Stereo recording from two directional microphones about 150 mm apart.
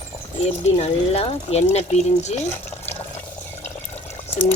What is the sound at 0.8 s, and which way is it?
Speech, 45° left (ahead or behind).